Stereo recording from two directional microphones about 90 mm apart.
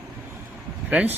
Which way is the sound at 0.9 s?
15° right (ahead or behind).